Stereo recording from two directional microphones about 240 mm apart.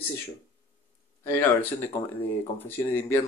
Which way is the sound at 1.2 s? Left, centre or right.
Centre.